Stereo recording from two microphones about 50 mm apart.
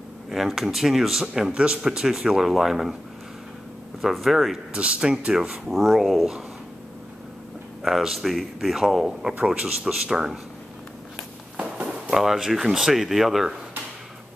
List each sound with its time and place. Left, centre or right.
0.3 s speech: centre
4.0 s a man's voice: centre
4.7 s speech: right
5.7 s a man's voice: centre
7.8 s a man's voice: centre
9.4 s speech: centre
12.1 s speech: centre